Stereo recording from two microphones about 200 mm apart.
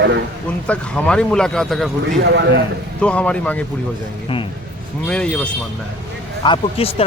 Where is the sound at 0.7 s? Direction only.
5° left (ahead or behind).